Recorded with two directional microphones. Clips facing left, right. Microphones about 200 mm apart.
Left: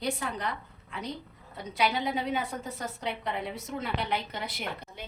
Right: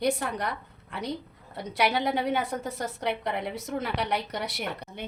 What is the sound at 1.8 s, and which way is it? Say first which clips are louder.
A woman's voice: right 3 dB; 70° right (ahead or behind).